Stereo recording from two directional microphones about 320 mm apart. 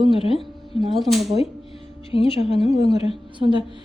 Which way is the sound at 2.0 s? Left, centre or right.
Centre.